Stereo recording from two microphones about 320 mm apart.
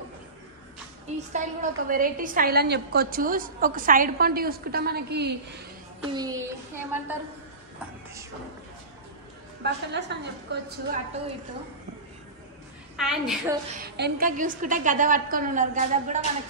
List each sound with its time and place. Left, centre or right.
1.3 s a woman's voice: right
6.1 s speech: centre
9.6 s a woman's voice: right
12.9 s a woman's voice: centre
13.8 s a woman's voice: right